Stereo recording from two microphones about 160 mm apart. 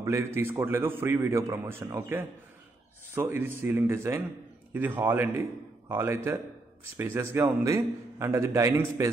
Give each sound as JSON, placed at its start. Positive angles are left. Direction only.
{"t": 0.0, "sound": "a man's voice", "side_deg": -15}